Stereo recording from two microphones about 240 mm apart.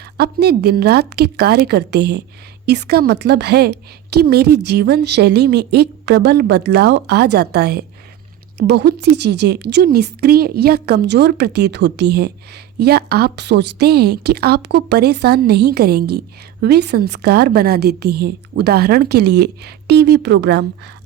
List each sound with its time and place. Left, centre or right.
0.2 s a woman's voice: right